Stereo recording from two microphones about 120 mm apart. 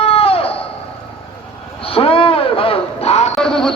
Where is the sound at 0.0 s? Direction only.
55° left (ahead or behind).